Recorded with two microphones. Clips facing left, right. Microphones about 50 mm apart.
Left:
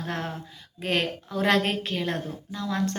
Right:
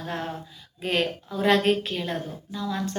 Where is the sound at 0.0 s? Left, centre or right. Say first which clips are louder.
Even; left.